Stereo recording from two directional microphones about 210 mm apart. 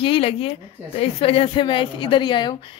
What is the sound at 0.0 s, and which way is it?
A woman's voice, 25° left (ahead or behind).